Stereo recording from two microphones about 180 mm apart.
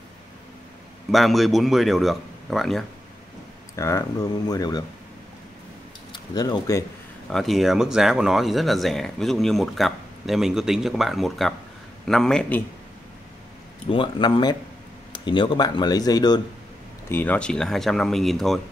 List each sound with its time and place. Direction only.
1.1 s speech: centre (ahead or behind)
3.7 s speech: 15° left (ahead or behind)
6.1 s speech: 25° left (ahead or behind)
7.2 s speech: centre (ahead or behind)
13.8 s speech: 30° left (ahead or behind)
17.1 s speech: 10° left (ahead or behind)